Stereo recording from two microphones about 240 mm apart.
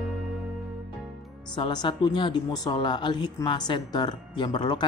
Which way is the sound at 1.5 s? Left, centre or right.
Centre.